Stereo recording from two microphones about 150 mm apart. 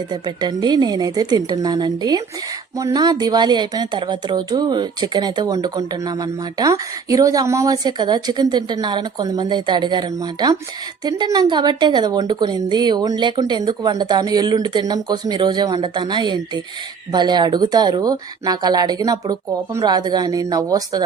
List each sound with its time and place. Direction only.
0.1 s speech: 30° right (ahead or behind)